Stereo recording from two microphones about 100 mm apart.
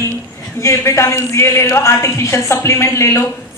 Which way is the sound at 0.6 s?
30° left (ahead or behind).